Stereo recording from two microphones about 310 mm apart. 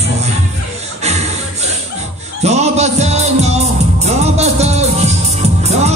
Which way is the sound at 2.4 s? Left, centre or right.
Right.